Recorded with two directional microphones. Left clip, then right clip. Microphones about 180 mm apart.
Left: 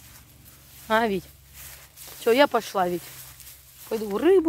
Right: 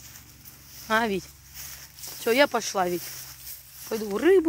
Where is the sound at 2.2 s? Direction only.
5° left (ahead or behind).